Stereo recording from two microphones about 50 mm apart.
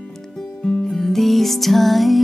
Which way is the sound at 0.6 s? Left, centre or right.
Centre.